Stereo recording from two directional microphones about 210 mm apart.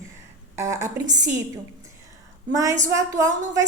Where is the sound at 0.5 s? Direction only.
15° right (ahead or behind).